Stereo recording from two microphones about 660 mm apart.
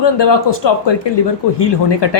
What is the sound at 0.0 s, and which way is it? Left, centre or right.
A woman's voice, left.